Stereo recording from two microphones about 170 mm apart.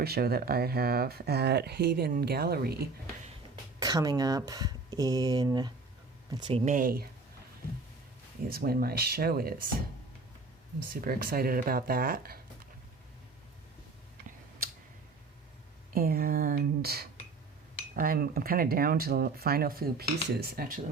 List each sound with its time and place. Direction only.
0.0 s speech: 65° right (ahead or behind)
3.8 s speech: 20° right (ahead or behind)
6.5 s speech: 50° right (ahead or behind)
8.4 s speech: 60° right (ahead or behind)
10.8 s speech: 60° right (ahead or behind)
16.0 s speech: 60° right (ahead or behind)